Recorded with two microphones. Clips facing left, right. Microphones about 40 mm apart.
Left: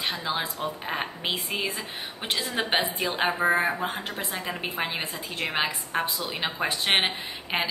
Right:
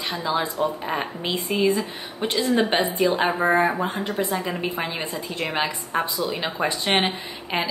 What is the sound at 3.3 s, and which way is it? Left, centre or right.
Speech, centre.